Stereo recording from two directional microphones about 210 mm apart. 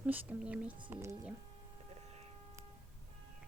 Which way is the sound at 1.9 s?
30° right (ahead or behind).